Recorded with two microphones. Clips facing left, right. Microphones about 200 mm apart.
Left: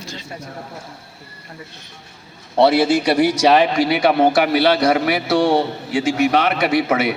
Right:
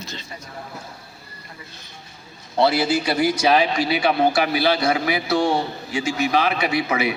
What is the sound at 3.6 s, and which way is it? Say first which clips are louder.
A man's voice: left 4 dB; 55° left (ahead or behind).